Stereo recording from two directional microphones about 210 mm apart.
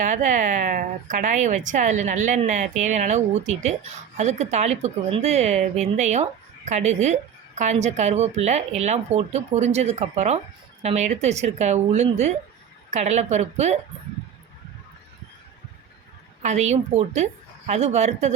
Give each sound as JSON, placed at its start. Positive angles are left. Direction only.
{"t": 0.0, "sound": "a woman's voice", "side_deg": -35}
{"t": 16.4, "sound": "a woman's voice", "side_deg": -35}